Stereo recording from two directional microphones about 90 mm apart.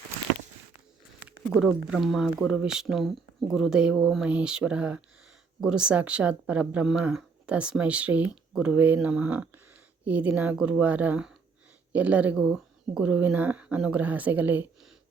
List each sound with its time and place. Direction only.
1.5 s speech: 5° right (ahead or behind)
13.1 s speech: 15° right (ahead or behind)